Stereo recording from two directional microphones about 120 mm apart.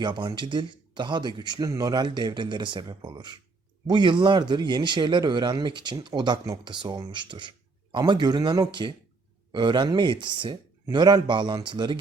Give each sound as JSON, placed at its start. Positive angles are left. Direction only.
{"t": 0.0, "sound": "speech", "side_deg": -40}